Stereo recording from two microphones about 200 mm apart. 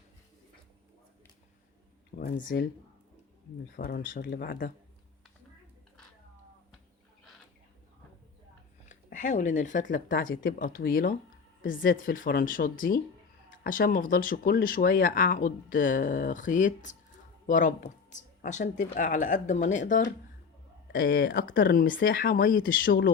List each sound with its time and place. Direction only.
2.1 s speech: 45° left (ahead or behind)
3.8 s speech: 50° left (ahead or behind)
8.9 s speech: 40° left (ahead or behind); by 22.0 s 60° left (ahead or behind)
22.0 s speech: 45° left (ahead or behind)